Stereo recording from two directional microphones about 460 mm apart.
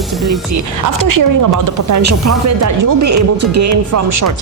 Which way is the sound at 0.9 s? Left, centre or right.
Right.